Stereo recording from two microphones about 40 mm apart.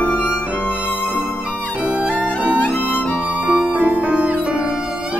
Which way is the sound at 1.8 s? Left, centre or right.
Right.